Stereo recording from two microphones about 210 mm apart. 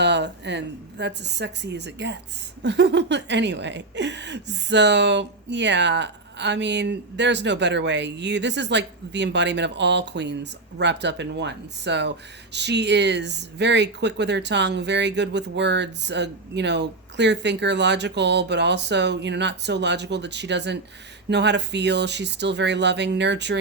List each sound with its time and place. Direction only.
0.0 s speech: 55° right (ahead or behind)